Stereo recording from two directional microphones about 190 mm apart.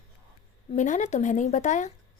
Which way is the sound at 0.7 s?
40° left (ahead or behind).